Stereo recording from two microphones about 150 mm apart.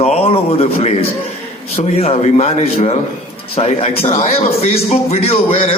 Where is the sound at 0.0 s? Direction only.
40° left (ahead or behind).